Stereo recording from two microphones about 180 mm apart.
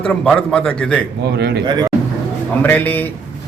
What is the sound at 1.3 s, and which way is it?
Speech, 65° right (ahead or behind).